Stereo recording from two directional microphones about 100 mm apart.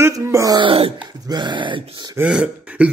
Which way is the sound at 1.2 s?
50° right (ahead or behind).